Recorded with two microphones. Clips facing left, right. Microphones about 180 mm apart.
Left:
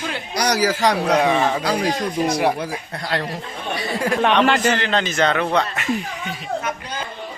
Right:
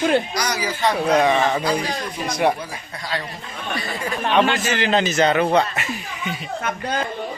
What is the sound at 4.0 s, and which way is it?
Speech, 75° left (ahead or behind).